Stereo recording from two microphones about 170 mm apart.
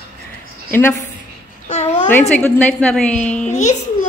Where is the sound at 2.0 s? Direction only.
10° left (ahead or behind).